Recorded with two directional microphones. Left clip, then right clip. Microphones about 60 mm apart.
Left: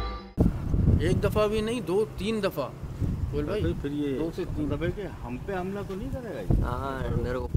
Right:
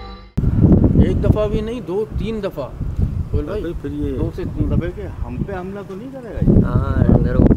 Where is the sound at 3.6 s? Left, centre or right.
Right.